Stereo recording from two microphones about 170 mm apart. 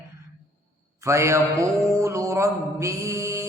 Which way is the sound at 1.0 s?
15° right (ahead or behind).